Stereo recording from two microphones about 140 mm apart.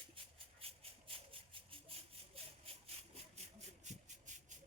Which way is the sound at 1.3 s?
40° right (ahead or behind).